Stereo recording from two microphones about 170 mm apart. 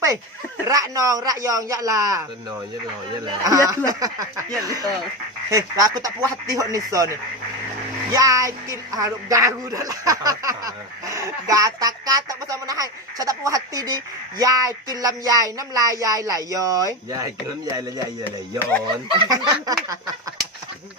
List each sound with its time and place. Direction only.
0.7 s speech: 20° right (ahead or behind)
3.4 s speech: 20° right (ahead or behind)
19.0 s speech: 25° right (ahead or behind)